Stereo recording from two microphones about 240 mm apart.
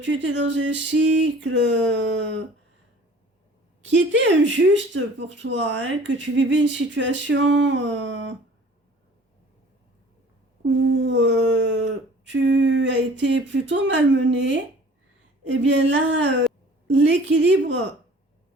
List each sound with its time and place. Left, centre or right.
0.0 s speech: right
3.8 s speech: right
10.6 s speech: right